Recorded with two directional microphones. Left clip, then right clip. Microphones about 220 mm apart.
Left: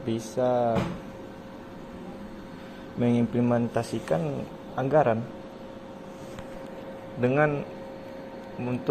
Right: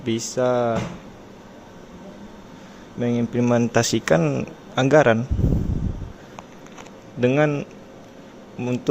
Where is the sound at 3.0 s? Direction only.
15° right (ahead or behind).